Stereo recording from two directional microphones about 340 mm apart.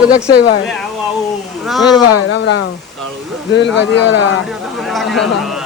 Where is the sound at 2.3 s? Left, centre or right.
Left.